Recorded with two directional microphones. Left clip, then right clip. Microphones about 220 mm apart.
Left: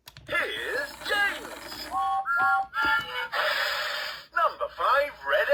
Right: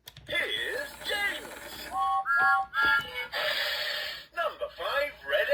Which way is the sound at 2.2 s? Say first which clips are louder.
Right 1 dB; centre (ahead or behind).